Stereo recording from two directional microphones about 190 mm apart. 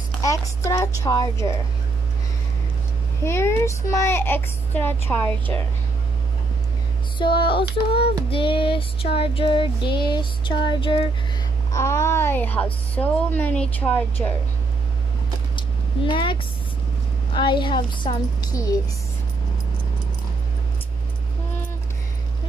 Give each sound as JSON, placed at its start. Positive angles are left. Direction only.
{"t": 0.2, "sound": "speech", "side_deg": 15}
{"t": 3.3, "sound": "speech", "side_deg": 15}
{"t": 7.2, "sound": "child singing", "side_deg": 25}
{"t": 11.7, "sound": "speech", "side_deg": 15}
{"t": 15.5, "sound": "a sound", "side_deg": 25}
{"t": 17.3, "sound": "child singing", "side_deg": 25}